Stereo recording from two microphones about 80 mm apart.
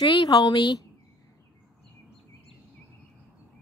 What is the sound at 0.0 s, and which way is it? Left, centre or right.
Speech, left.